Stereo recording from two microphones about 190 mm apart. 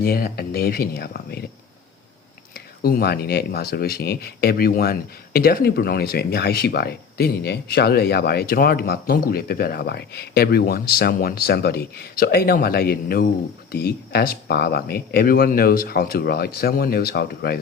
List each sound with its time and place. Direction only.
0.0 s speech: 50° left (ahead or behind)
2.8 s speech: 55° left (ahead or behind)